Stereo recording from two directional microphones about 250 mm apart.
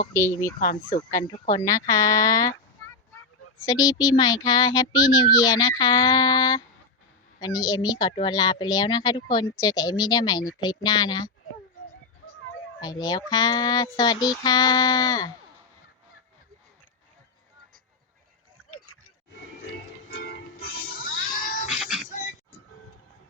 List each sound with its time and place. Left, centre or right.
0.1 s speech: centre
0.6 s speech: left
1.1 s speech: centre
3.7 s speech: centre
12.8 s speech: centre
18.7 s a sound: left
20.1 s music: left
21.7 s music: centre